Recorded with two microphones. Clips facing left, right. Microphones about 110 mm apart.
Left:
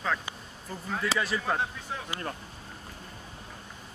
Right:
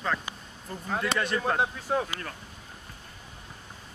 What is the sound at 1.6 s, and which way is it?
Speech, 50° right (ahead or behind).